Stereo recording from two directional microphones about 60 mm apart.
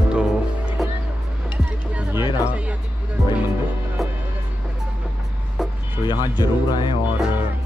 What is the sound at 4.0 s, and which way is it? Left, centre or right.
Music, centre.